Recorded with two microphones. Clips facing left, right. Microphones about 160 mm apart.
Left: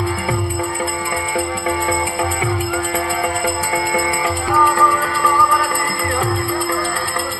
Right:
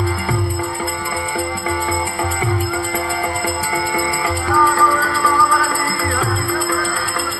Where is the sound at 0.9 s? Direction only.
10° left (ahead or behind).